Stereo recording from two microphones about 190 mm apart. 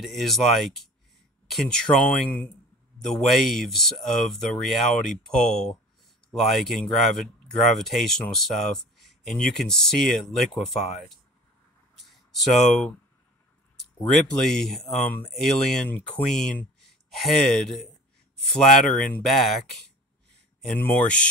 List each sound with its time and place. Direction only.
0.0 s speech: centre (ahead or behind)
12.0 s a sound: centre (ahead or behind)
14.1 s speech: centre (ahead or behind)
20.6 s speech: 10° left (ahead or behind)